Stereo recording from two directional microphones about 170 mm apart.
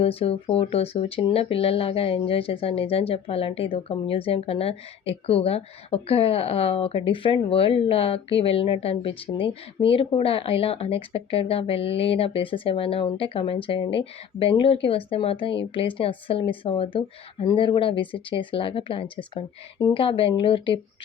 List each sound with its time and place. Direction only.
0.0 s speech: 35° left (ahead or behind)